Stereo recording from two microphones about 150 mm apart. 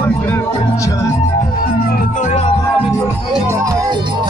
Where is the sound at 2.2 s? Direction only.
50° left (ahead or behind).